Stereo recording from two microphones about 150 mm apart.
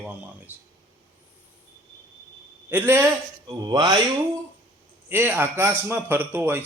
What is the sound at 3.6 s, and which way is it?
Speech, 25° right (ahead or behind).